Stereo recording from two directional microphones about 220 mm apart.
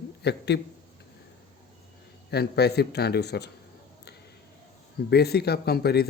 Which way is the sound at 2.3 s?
45° left (ahead or behind).